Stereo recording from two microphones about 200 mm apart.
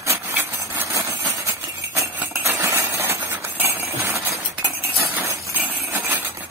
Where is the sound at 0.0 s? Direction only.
10° right (ahead or behind).